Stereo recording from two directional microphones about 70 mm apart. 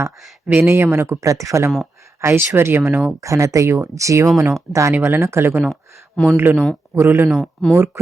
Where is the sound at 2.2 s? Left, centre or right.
Right.